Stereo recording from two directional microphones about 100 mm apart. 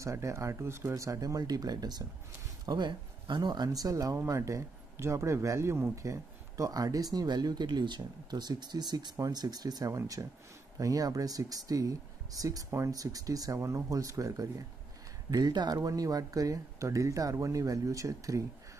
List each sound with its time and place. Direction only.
0.0 s speech: 30° right (ahead or behind)
15.3 s speech: 45° right (ahead or behind)